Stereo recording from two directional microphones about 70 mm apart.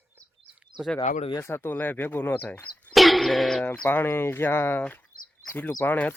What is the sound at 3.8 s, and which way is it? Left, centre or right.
Speech, left.